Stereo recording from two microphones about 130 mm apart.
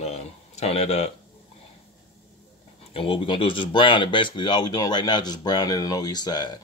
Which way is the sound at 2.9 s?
45° left (ahead or behind).